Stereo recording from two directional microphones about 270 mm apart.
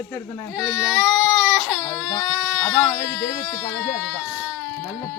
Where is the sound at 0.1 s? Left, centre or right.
Centre.